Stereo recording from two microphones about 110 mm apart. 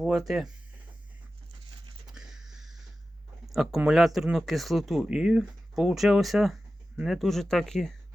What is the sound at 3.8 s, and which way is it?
Speech, 5° right (ahead or behind).